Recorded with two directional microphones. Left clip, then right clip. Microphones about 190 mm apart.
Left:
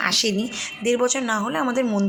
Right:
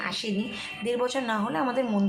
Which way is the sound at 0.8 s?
20° left (ahead or behind).